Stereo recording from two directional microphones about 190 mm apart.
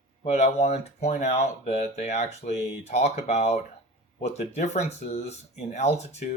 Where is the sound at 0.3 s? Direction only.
35° left (ahead or behind).